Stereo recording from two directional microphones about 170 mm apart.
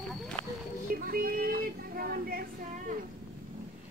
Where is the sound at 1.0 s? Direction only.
60° right (ahead or behind).